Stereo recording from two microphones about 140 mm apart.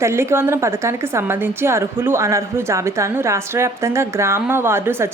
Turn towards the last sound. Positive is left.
turn(degrees=-15)  # may be behind; listen again after turning